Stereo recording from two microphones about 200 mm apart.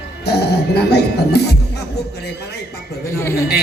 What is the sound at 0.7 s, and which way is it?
Speech, 55° left (ahead or behind).